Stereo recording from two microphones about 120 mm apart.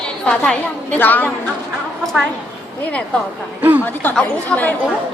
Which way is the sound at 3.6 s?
15° right (ahead or behind).